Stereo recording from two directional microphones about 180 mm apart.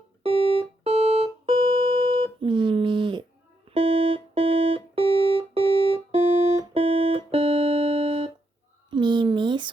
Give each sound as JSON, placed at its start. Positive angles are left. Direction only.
{"t": 0.9, "sound": "music", "side_deg": -35}
{"t": 5.0, "sound": "music", "side_deg": 15}
{"t": 5.4, "sound": "music", "side_deg": -30}
{"t": 8.9, "sound": "a sound", "side_deg": -25}